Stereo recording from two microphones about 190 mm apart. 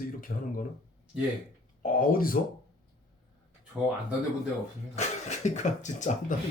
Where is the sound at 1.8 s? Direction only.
50° left (ahead or behind).